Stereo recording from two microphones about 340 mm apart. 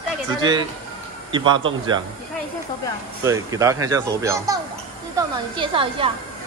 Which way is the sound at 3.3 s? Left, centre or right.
Centre.